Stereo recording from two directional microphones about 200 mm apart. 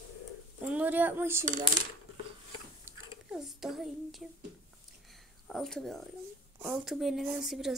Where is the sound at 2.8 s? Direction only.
5° right (ahead or behind).